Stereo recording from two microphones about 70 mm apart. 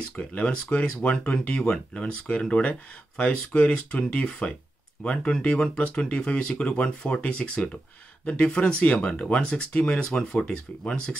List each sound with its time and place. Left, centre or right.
0.1 s speech: left